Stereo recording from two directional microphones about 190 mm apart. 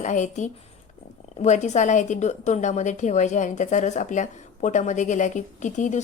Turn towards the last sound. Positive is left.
turn(degrees=40)  # may be behind; listen again after turning